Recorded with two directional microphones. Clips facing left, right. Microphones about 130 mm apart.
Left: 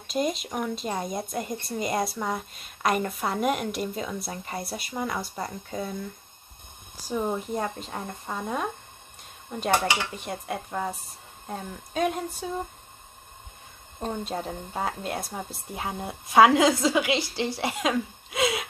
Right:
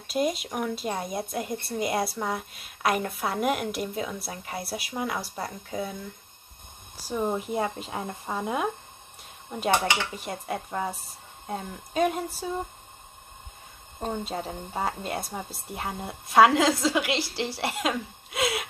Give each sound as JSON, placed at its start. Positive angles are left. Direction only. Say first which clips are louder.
{"t": 0.0, "sound": "speech", "louder": "right 1 dB", "side_deg": -5}
{"t": 7.1, "sound": "speech", "louder": "even", "side_deg": 0}
{"t": 13.9, "sound": "speech", "louder": "even", "side_deg": -5}